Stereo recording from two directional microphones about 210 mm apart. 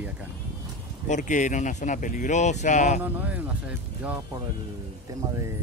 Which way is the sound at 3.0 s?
10° right (ahead or behind).